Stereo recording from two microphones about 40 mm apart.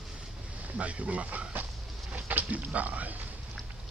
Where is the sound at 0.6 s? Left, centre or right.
Right.